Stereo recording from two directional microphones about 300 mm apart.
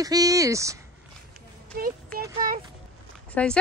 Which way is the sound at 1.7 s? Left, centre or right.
Right.